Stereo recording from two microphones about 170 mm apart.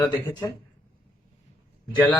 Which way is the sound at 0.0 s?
10° left (ahead or behind).